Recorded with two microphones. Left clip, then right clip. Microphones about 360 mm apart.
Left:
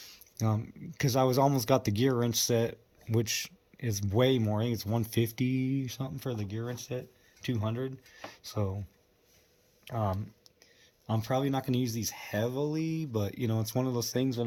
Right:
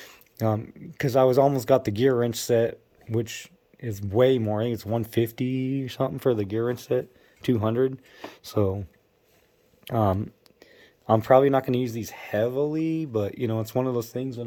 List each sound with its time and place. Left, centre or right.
0.0 s speech: centre
9.8 s speech: centre